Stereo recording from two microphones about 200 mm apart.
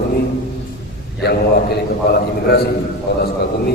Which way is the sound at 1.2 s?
50° left (ahead or behind).